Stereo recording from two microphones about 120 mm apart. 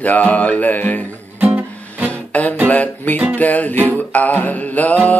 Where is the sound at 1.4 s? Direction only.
15° right (ahead or behind).